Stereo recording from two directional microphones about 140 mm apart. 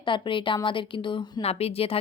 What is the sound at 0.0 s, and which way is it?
Speech, 35° left (ahead or behind).